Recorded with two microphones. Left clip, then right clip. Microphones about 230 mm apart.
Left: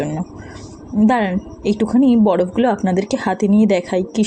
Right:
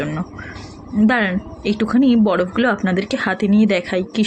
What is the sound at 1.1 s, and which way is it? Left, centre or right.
A woman's voice, centre.